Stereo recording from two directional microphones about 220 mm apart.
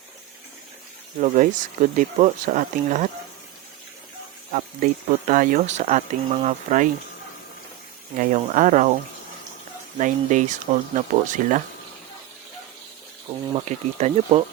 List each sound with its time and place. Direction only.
1.2 s speech: 35° right (ahead or behind)
4.5 s speech: 40° right (ahead or behind)
8.2 s speech: 35° right (ahead or behind)
10.0 s speech: 35° right (ahead or behind)
13.5 s speech: 30° right (ahead or behind)